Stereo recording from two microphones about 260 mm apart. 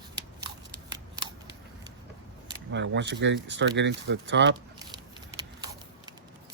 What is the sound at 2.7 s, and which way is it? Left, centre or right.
Speech, right.